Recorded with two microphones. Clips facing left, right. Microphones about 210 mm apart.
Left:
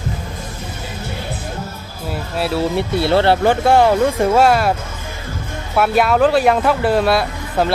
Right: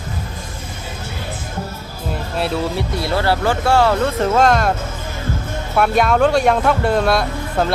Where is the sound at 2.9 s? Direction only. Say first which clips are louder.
Left 5 dB; 30° left (ahead or behind); by 4.7 s 5° left (ahead or behind).